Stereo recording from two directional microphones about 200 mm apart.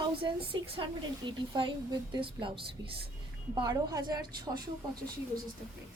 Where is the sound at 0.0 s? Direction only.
25° right (ahead or behind).